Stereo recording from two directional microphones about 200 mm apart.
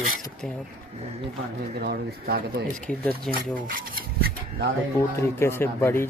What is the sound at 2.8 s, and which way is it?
Speech, 5° left (ahead or behind).